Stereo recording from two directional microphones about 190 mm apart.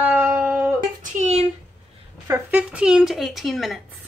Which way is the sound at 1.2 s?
35° right (ahead or behind).